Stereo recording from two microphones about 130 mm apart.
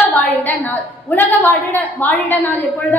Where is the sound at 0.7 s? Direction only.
15° left (ahead or behind).